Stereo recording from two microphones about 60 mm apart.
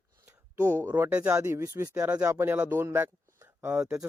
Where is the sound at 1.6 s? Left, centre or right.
Right.